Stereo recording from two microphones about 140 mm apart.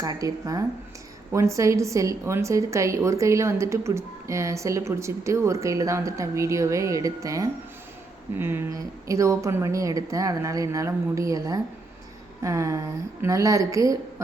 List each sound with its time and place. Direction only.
0.0 s a woman's voice: 25° right (ahead or behind)